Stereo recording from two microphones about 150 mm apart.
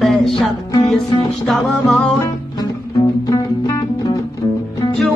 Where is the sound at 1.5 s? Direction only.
Centre (ahead or behind).